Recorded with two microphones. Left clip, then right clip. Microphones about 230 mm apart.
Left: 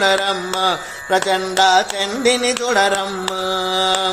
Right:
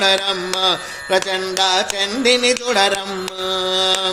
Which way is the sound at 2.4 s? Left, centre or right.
Right.